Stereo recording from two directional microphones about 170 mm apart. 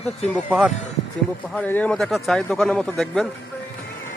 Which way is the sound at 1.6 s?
10° left (ahead or behind).